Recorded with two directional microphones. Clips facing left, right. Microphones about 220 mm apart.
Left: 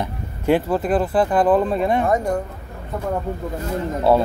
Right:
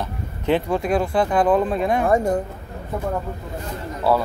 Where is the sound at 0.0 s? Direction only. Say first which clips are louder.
Left 3 dB; 10° left (ahead or behind).